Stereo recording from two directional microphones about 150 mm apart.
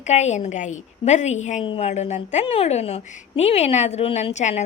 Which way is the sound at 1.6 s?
40° left (ahead or behind).